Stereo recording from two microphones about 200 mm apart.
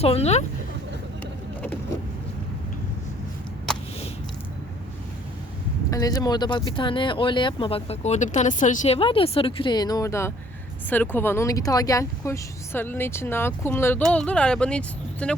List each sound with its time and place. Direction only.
0.0 s speech: 30° left (ahead or behind)
3.7 s a sound: 5° left (ahead or behind)
5.9 s speech: 20° left (ahead or behind)